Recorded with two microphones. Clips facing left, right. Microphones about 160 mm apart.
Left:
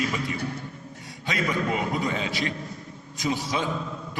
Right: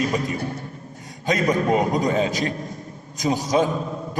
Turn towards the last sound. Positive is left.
turn(degrees=-45)  # may be behind; listen again after turning